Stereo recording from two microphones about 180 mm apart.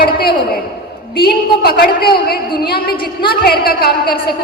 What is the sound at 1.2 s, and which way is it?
A woman's voice, 60° left (ahead or behind).